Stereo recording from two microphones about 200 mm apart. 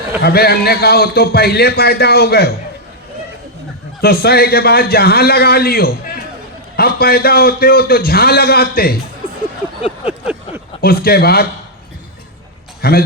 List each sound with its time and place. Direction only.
0.2 s a man's voice: 50° left (ahead or behind)
4.0 s a man's voice: 50° left (ahead or behind)
10.8 s a man's voice: 50° left (ahead or behind)
12.8 s a man's voice: 50° left (ahead or behind)